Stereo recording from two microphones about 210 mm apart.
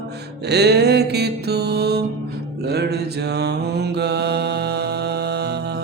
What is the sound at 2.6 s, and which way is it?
Mantra, 50° right (ahead or behind).